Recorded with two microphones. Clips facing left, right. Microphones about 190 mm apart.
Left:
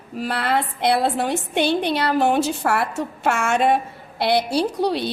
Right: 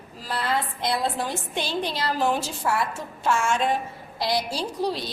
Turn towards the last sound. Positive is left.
turn(degrees=65)  # may be behind; listen again after turning